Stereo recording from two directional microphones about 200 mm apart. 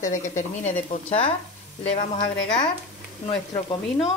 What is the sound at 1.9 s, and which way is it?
Speech, 25° left (ahead or behind).